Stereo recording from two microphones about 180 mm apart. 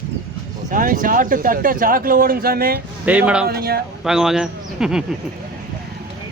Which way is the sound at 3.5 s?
60° right (ahead or behind).